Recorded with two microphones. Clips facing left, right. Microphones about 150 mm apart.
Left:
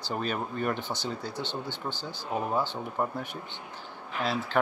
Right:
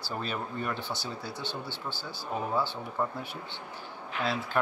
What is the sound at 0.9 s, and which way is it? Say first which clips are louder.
Speech: left 3 dB; 20° left (ahead or behind).